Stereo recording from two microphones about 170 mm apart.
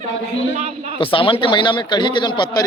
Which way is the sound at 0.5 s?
40° right (ahead or behind).